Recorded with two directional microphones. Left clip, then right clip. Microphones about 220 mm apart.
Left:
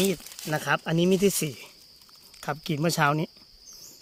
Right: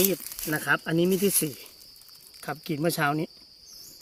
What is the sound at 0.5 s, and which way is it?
A man's voice, 40° left (ahead or behind).